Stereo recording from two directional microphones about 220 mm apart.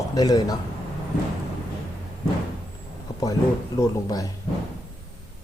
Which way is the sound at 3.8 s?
15° left (ahead or behind).